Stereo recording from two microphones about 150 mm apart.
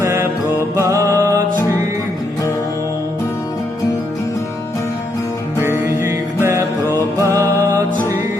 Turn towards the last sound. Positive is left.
turn(degrees=-20)  # may be behind; listen again after turning